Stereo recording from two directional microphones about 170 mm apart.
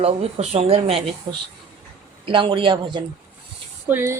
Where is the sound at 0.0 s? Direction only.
35° right (ahead or behind).